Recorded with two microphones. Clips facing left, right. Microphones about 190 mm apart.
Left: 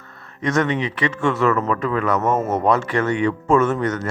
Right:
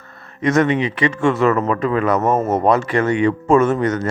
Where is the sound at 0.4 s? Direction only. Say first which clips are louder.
Right 4 dB; 10° right (ahead or behind).